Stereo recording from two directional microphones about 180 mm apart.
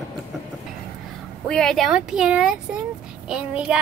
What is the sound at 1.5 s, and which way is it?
Speech, 5° left (ahead or behind).